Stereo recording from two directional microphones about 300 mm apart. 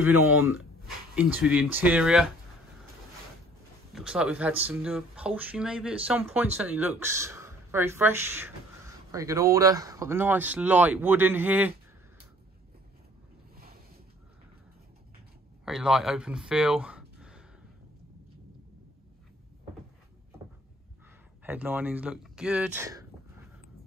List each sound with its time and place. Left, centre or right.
0.0 s speech: centre
3.9 s speech: centre
15.6 s speech: centre
21.5 s speech: centre